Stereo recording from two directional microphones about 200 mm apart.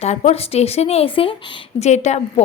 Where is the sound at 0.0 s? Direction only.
35° left (ahead or behind).